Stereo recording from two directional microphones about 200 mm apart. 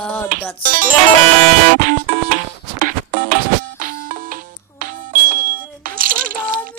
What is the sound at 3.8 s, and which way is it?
Music, 45° right (ahead or behind).